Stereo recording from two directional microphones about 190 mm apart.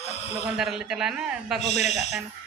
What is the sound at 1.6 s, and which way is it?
Speech, 35° left (ahead or behind).